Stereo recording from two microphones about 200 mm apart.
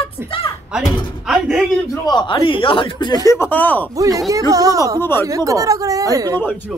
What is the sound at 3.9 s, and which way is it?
Speech, 15° right (ahead or behind).